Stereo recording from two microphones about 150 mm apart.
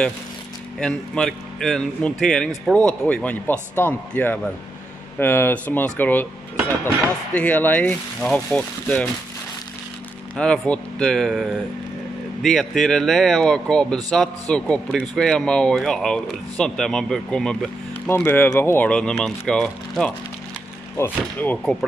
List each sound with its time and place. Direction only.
0.7 s speech: 5° left (ahead or behind)
7.3 s speech: 10° left (ahead or behind)
10.3 s speech: 5° left (ahead or behind)